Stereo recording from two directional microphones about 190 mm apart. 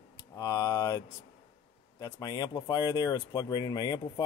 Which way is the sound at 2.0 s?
20° left (ahead or behind).